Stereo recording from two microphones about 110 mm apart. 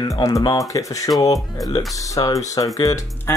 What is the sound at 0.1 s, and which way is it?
Speech, 30° left (ahead or behind).